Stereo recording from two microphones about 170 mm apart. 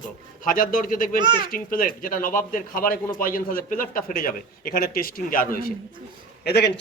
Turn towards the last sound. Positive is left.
turn(degrees=75)  # may be behind; listen again after turning